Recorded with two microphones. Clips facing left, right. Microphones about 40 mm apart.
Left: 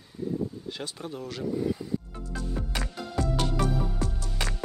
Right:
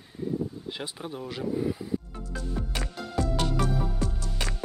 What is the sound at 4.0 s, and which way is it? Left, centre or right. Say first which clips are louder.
Music: even; left.